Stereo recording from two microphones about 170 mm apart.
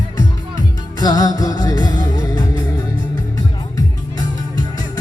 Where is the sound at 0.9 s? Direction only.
20° left (ahead or behind).